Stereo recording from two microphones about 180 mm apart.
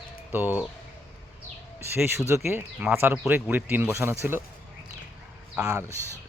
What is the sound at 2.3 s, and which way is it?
Speech, 15° right (ahead or behind).